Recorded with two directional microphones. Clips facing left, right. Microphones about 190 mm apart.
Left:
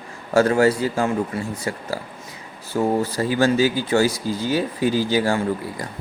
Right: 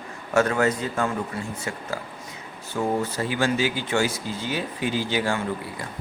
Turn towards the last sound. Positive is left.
turn(degrees=40)  # may be behind; listen again after turning